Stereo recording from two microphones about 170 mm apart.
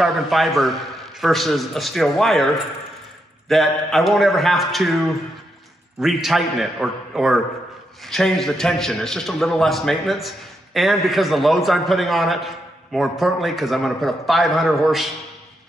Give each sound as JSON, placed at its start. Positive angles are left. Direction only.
{"t": 0.0, "sound": "a man's voice", "side_deg": 0}